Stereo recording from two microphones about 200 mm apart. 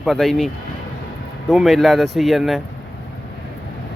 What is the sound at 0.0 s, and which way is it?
Speech, centre (ahead or behind).